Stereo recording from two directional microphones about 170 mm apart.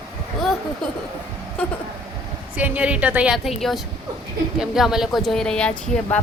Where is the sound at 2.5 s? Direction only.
10° right (ahead or behind).